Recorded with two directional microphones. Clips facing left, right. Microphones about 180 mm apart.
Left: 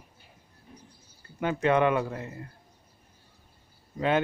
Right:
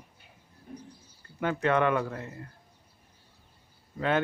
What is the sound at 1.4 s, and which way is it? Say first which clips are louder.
Speech: left 2 dB; 15° left (ahead or behind).